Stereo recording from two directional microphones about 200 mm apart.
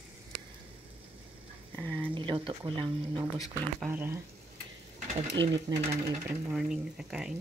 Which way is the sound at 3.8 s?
10° right (ahead or behind).